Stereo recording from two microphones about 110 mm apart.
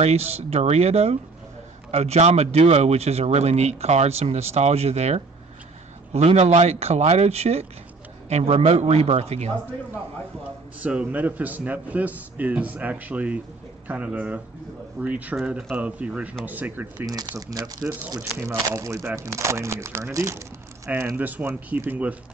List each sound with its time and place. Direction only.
0.0 s speech: 70° right (ahead or behind)
10.8 s a man's voice: 10° right (ahead or behind)
17.0 s speech: 35° right (ahead or behind); by 22.1 s 15° right (ahead or behind)